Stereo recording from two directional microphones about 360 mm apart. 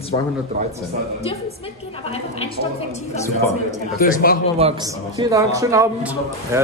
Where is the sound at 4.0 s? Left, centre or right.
Left.